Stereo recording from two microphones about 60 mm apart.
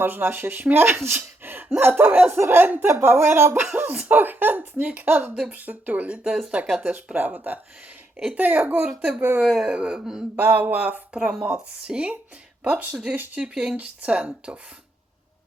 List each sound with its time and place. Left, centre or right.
0.0 s speech: right
3.6 s speech: right
6.2 s speech: centre
6.8 s speech: right
8.1 s speech: centre
8.4 s speech: right
9.0 s speech: centre
10.3 s speech: right
13.4 s speech: centre
13.7 s speech: right